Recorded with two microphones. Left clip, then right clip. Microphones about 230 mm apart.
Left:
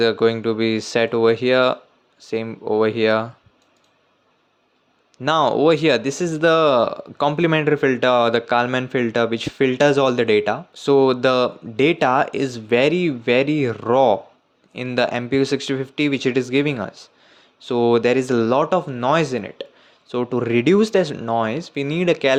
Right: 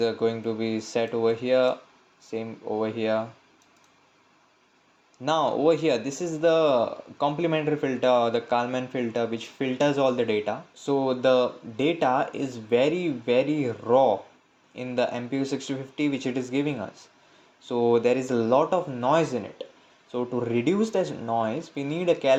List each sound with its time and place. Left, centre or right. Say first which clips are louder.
0.0 s speech: left 8 dB; left
5.2 s speech: left 6 dB; left